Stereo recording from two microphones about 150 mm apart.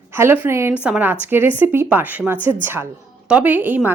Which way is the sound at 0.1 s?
15° right (ahead or behind).